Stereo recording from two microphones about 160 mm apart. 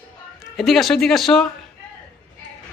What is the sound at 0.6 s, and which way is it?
Speech, centre (ahead or behind).